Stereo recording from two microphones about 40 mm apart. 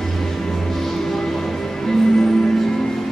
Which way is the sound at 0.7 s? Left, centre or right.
Centre.